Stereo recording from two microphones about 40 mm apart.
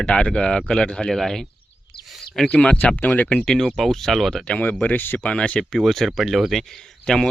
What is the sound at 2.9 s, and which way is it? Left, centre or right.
Speech, left.